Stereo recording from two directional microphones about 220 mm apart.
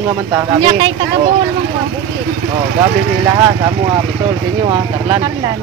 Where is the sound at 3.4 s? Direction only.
15° right (ahead or behind).